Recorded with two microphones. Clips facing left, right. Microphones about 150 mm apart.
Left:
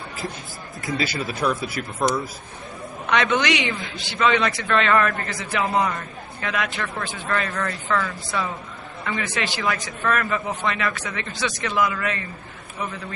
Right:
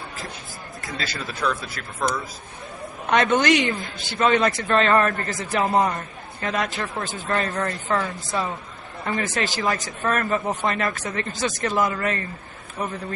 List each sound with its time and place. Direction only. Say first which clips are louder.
0.9 s speech: left 6 dB; 10° left (ahead or behind)
3.1 s a man's voice: right 2 dB; 50° right (ahead or behind)